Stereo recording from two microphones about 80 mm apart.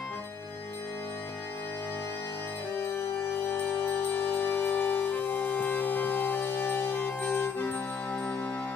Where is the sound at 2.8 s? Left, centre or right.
Left.